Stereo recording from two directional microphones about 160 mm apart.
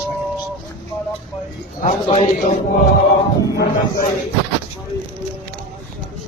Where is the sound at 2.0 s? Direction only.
40° left (ahead or behind).